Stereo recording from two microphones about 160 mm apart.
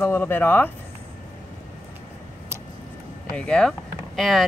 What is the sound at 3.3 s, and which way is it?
Speech, 5° left (ahead or behind).